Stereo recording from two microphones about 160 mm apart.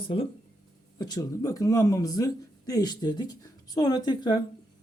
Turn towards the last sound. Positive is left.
turn(degrees=25)  # may be behind; listen again after turning